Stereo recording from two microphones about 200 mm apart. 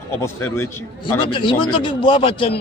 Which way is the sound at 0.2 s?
10° left (ahead or behind).